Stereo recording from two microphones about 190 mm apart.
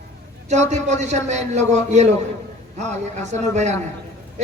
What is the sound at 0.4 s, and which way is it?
A man's voice, 35° right (ahead or behind).